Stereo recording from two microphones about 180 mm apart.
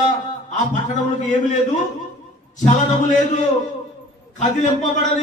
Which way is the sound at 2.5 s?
40° left (ahead or behind).